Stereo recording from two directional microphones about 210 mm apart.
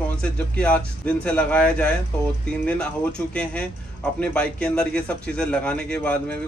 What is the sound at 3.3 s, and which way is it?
A man's voice, 5° left (ahead or behind).